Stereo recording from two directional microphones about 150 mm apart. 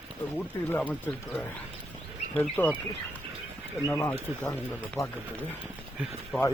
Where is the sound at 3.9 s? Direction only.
20° left (ahead or behind).